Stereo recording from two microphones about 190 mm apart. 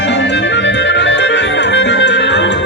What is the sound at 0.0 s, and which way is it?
Music, 65° left (ahead or behind).